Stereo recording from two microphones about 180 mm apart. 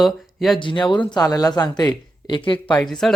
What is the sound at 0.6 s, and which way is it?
Speech, 25° left (ahead or behind).